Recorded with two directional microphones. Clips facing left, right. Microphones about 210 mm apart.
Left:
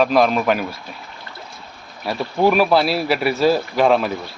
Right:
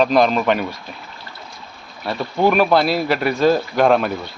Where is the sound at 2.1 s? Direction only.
5° left (ahead or behind).